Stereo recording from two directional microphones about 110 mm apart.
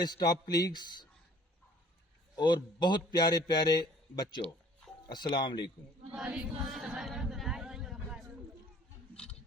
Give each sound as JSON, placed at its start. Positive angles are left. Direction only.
{"t": 0.0, "sound": "a man's voice", "side_deg": 35}
{"t": 2.3, "sound": "a man's voice", "side_deg": 40}
{"t": 6.1, "sound": "a sound", "side_deg": -10}